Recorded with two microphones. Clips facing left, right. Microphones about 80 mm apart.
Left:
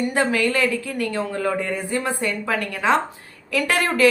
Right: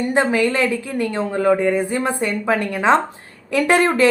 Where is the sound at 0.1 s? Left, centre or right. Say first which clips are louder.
Right 3 dB; right.